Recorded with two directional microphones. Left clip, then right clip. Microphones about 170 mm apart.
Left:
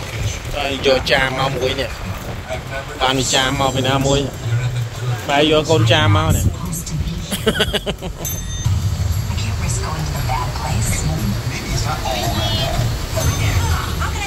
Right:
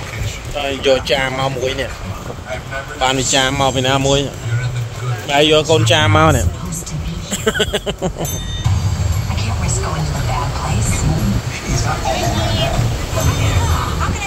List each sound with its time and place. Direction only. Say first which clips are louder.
0.7 s speech: right 1 dB; 35° right (ahead or behind)
3.0 s a man's voice: right 1 dB; 45° right (ahead or behind); by 4.3 s 65° right (ahead or behind)
5.3 s speech: right 2 dB; 75° right (ahead or behind)
7.2 s speech: right 1 dB; 45° right (ahead or behind)